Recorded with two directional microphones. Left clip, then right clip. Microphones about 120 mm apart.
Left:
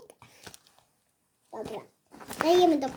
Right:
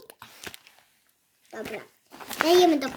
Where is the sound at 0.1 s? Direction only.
15° right (ahead or behind).